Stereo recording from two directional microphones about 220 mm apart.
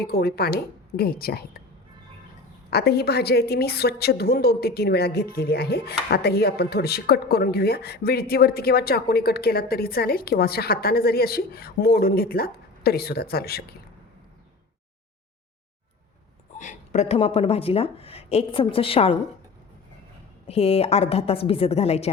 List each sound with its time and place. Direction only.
0.0 s a woman's voice: 45° left (ahead or behind)
2.6 s a woman's voice: 45° left (ahead or behind)
16.6 s speech: 30° left (ahead or behind)
20.5 s speech: 25° left (ahead or behind)